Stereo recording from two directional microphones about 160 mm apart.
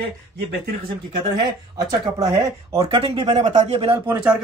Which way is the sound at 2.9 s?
35° right (ahead or behind).